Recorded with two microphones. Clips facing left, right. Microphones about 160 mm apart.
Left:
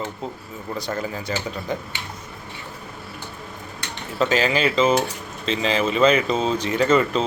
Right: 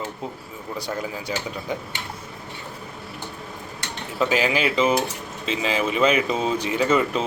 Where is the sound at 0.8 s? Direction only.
10° right (ahead or behind).